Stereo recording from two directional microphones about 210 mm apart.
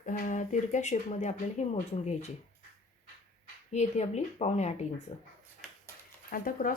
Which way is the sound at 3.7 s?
30° left (ahead or behind).